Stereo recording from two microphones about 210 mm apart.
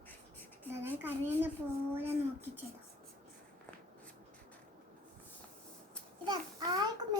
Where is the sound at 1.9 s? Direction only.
10° right (ahead or behind).